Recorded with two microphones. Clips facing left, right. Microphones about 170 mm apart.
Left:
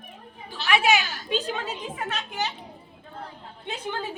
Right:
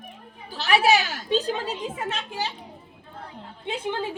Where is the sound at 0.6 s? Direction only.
35° right (ahead or behind).